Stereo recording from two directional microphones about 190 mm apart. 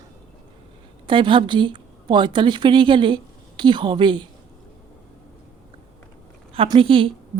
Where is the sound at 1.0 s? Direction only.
25° right (ahead or behind).